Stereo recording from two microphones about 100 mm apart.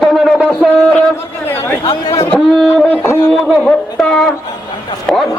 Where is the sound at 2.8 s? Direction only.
20° left (ahead or behind).